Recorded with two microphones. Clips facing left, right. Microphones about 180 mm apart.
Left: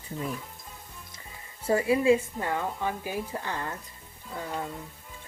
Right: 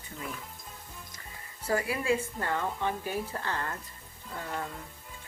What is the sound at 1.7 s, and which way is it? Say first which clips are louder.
A woman's voice: left 7 dB; 25° left (ahead or behind).